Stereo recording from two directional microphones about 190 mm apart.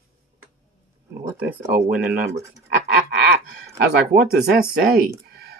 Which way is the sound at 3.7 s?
55° right (ahead or behind).